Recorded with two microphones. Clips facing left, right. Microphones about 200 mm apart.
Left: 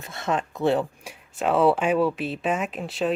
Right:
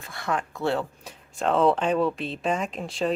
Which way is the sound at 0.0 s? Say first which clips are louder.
Left 2 dB; 20° left (ahead or behind).